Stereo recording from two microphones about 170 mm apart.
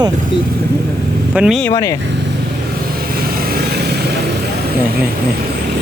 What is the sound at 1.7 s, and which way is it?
Speech, 20° left (ahead or behind).